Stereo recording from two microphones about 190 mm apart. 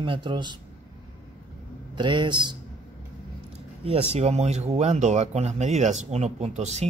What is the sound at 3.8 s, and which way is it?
Speech, 30° right (ahead or behind).